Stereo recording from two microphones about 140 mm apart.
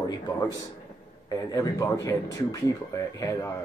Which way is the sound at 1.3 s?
25° left (ahead or behind).